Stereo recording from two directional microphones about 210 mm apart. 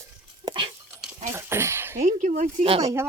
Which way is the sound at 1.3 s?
10° right (ahead or behind).